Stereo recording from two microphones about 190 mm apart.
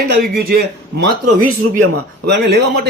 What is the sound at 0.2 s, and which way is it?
Speech, 55° right (ahead or behind).